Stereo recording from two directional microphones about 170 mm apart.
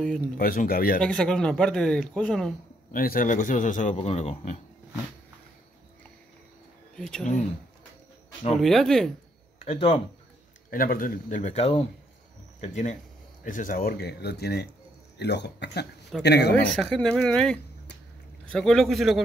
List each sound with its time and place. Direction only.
0.4 s speech: 60° left (ahead or behind)
1.0 s speech: 5° left (ahead or behind)
2.9 s a man's voice: 55° left (ahead or behind); by 4.6 s 40° left (ahead or behind)
7.0 s speech: 5° left (ahead or behind)
8.5 s speech: centre (ahead or behind)
9.7 s speech: 35° left (ahead or behind)
10.7 s a man's voice: 55° left (ahead or behind); by 16.5 s 80° left
16.5 s speech: 5° left (ahead or behind)